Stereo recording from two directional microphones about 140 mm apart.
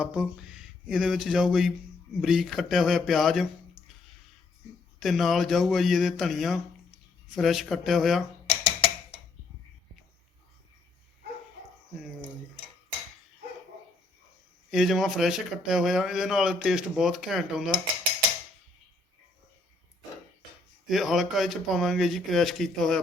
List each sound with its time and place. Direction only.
0.0 s a man's voice: 5° right (ahead or behind)
4.9 s a man's voice: centre (ahead or behind)
14.7 s a man's voice: centre (ahead or behind)
20.8 s a man's voice: centre (ahead or behind)